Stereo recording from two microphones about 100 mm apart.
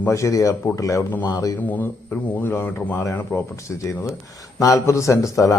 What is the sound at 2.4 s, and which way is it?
Speech, 20° left (ahead or behind).